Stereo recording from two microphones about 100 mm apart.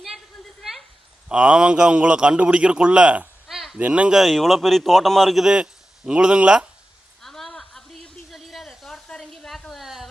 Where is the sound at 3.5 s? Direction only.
Centre (ahead or behind).